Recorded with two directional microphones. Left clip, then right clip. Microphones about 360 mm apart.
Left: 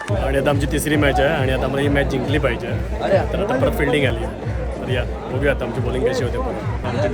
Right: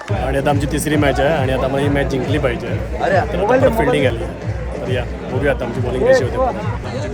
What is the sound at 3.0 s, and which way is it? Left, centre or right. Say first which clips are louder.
Speech: right 2 dB; right.